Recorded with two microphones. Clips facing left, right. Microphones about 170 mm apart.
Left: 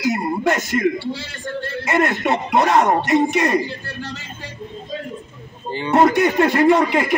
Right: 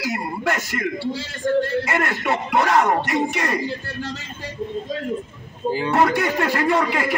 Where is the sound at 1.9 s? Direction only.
20° left (ahead or behind).